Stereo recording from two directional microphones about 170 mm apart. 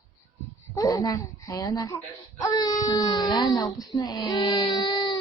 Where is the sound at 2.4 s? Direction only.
25° left (ahead or behind).